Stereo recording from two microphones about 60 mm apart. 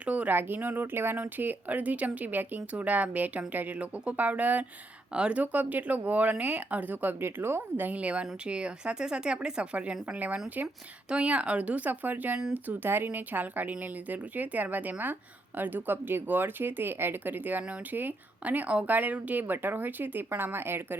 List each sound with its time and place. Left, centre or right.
0.0 s speech: right
11.1 s speech: centre; by 20.8 s right